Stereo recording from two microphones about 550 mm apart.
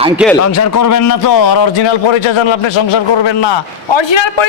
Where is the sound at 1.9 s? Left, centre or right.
Left.